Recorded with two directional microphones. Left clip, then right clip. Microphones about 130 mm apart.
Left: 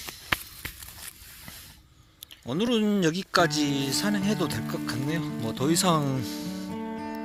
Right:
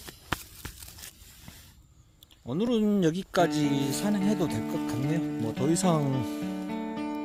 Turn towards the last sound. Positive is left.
turn(degrees=-20)  # may be behind; listen again after turning